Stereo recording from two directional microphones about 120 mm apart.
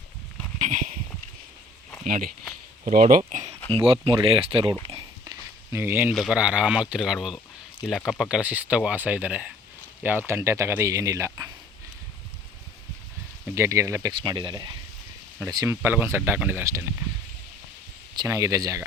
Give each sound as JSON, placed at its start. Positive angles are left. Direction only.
{"t": 0.6, "sound": "a sound", "side_deg": -90}
{"t": 2.8, "sound": "speech", "side_deg": -90}
{"t": 3.7, "sound": "speech", "side_deg": -50}
{"t": 5.2, "sound": "a sound", "side_deg": -25}
{"t": 6.1, "sound": "speech", "side_deg": -5}
{"t": 13.5, "sound": "speech", "side_deg": -25}
{"t": 14.1, "sound": "speech", "side_deg": -40}
{"t": 15.6, "sound": "speech", "side_deg": -20}
{"t": 18.1, "sound": "speech", "side_deg": -30}